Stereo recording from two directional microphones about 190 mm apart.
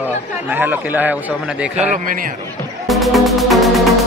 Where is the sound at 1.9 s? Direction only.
45° right (ahead or behind).